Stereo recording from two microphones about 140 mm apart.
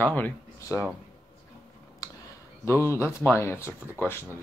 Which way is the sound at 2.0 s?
25° left (ahead or behind).